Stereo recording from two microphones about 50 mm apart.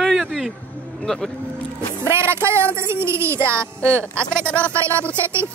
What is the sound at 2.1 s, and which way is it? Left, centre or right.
Speech, right.